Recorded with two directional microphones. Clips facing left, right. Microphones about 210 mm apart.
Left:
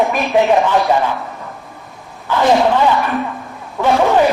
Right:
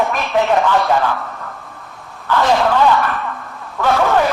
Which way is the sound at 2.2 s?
15° left (ahead or behind).